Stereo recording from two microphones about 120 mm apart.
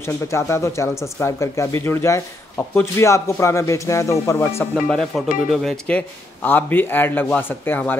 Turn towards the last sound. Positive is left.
turn(degrees=15)  # may be behind; listen again after turning